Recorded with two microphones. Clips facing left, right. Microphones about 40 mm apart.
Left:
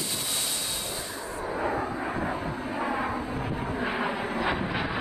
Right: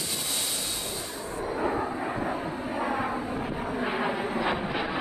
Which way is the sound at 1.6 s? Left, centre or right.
Centre.